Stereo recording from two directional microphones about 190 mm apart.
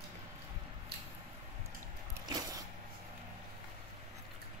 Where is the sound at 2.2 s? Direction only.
20° right (ahead or behind).